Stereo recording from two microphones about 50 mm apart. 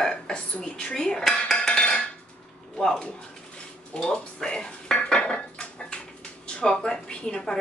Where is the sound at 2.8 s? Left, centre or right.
Centre.